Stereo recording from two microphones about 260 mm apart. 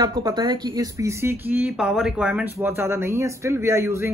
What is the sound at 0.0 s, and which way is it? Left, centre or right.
Speech, centre.